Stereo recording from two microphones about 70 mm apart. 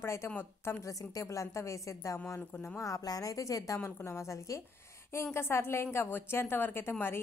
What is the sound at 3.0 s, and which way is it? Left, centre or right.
Speech, left.